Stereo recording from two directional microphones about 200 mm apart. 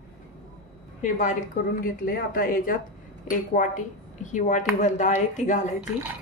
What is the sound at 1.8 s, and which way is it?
A woman's voice, 45° left (ahead or behind).